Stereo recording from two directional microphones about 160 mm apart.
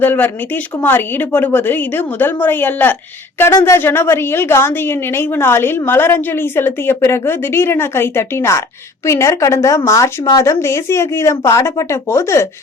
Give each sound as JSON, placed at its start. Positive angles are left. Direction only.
{"t": 0.0, "sound": "a woman's voice", "side_deg": 10}